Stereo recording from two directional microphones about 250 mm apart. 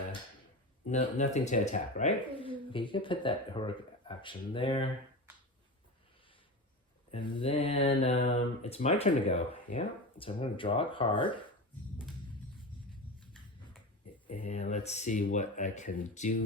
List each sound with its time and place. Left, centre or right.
0.9 s speech: left
7.1 s speech: left
14.3 s speech: left